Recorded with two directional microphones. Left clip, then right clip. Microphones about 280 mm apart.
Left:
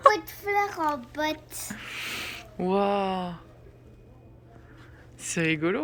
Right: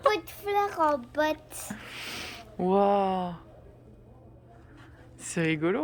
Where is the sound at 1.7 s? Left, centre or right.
Centre.